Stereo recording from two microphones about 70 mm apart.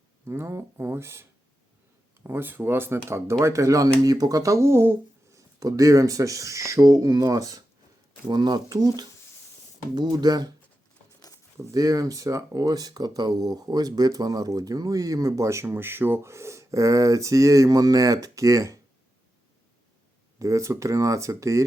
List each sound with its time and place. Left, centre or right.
0.3 s speech: right
5.3 s speech: right
8.3 s speech: right
9.9 s speech: right
11.6 s speech: right
20.4 s speech: right